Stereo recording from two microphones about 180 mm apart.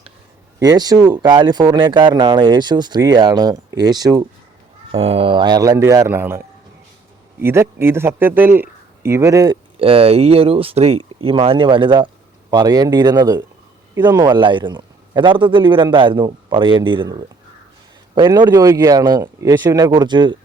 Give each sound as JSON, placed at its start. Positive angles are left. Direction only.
{"t": 0.6, "sound": "speech", "side_deg": -20}
{"t": 4.9, "sound": "speech", "side_deg": -35}
{"t": 7.4, "sound": "speech", "side_deg": -15}
{"t": 9.7, "sound": "speech", "side_deg": -30}